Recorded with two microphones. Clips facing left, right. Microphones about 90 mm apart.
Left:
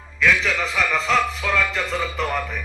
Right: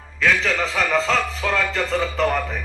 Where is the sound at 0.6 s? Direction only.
35° right (ahead or behind).